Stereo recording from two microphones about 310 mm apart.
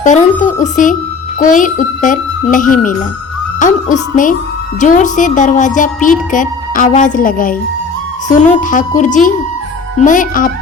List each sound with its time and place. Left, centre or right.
0.0 s music: left